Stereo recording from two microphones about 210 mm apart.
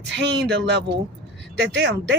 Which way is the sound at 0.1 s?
55° right (ahead or behind).